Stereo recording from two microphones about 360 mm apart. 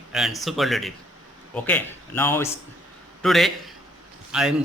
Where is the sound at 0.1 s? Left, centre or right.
Centre.